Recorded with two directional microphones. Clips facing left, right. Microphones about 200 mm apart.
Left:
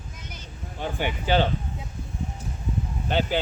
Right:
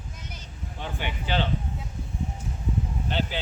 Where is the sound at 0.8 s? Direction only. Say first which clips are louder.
Left 5 dB; 45° left (ahead or behind).